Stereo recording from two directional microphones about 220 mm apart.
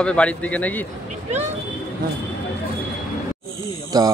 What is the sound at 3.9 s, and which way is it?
Speech, 15° right (ahead or behind).